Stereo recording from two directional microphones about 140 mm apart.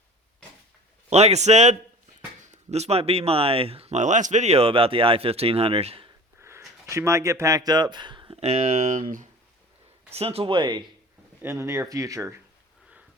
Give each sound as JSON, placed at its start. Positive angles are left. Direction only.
{"t": 1.1, "sound": "speech", "side_deg": -50}
{"t": 6.4, "sound": "speech", "side_deg": -20}
{"t": 8.4, "sound": "speech", "side_deg": -55}
{"t": 10.2, "sound": "speech", "side_deg": -45}
{"t": 11.4, "sound": "speech", "side_deg": -15}